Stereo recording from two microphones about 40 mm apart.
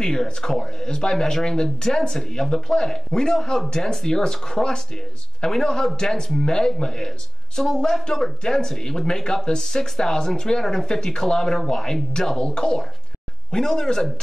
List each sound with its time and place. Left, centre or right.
0.0 s speech: centre